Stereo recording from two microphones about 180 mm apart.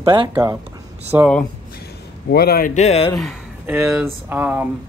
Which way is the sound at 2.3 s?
60° left (ahead or behind).